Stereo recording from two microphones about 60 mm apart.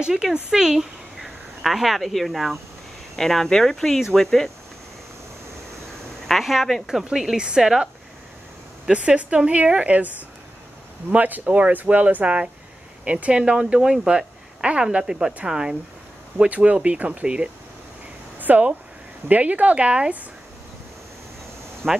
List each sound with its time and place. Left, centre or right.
0.0 s speech: centre
6.2 s speech: centre
8.9 s speech: centre
18.4 s speech: right
21.8 s speech: centre